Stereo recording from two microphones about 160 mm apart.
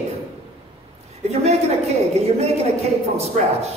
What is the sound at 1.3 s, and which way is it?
A woman's voice, 40° right (ahead or behind).